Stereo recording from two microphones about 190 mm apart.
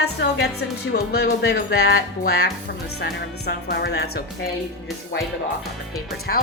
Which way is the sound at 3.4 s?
60° left (ahead or behind).